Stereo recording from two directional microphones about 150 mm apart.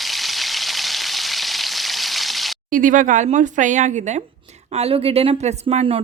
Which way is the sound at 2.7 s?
65° right (ahead or behind).